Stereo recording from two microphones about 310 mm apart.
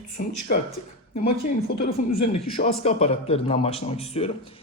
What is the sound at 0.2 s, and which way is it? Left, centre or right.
Speech, left.